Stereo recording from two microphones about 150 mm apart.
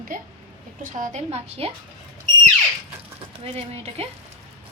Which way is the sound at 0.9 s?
50° right (ahead or behind).